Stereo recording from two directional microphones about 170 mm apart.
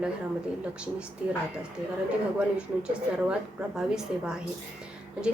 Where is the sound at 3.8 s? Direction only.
5° right (ahead or behind).